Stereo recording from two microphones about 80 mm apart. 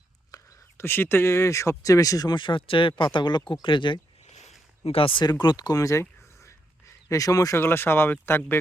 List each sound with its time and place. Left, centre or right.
0.3 s whispering: left
0.8 s speech: left
2.3 s speech: left
5.7 s a sound: left
7.1 s speech: left
7.5 s speech: left